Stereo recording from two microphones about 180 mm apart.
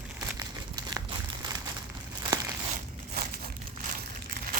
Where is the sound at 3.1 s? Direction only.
55° right (ahead or behind).